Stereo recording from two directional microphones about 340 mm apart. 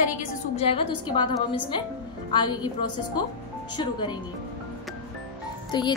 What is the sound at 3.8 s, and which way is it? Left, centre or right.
Speech, centre.